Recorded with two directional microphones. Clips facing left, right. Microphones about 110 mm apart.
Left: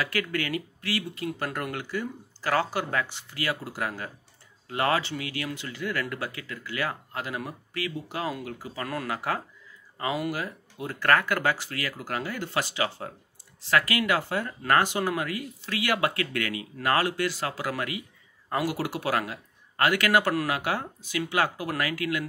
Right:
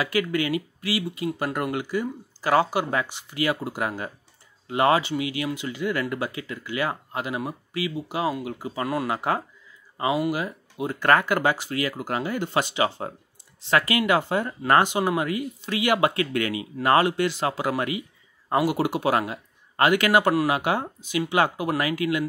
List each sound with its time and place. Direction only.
0.0 s speech: 15° right (ahead or behind)
9.9 s speech: 15° right (ahead or behind)